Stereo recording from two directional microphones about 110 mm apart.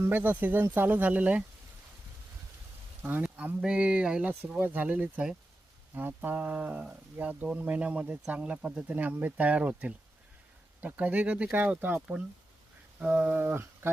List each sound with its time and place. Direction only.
0.0 s speech: 15° right (ahead or behind)
3.0 s speech: 15° right (ahead or behind)